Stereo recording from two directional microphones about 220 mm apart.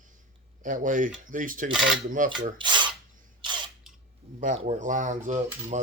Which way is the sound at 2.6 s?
20° right (ahead or behind).